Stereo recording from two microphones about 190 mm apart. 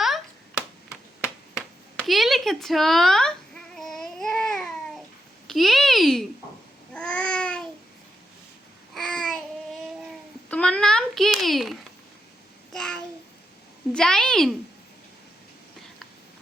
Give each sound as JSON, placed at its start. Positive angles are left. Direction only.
{"t": 1.2, "sound": "a sound", "side_deg": -5}
{"t": 3.8, "sound": "babbling", "side_deg": 0}
{"t": 5.5, "sound": "a child's voice", "side_deg": 0}
{"t": 6.9, "sound": "babbling", "side_deg": 5}
{"t": 9.0, "sound": "child singing", "side_deg": 5}
{"t": 10.5, "sound": "a sound", "side_deg": 5}
{"t": 12.7, "sound": "child singing", "side_deg": 5}
{"t": 13.9, "sound": "a child's voice", "side_deg": 5}